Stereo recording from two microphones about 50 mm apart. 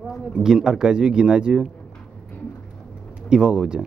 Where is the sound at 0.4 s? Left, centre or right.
Centre.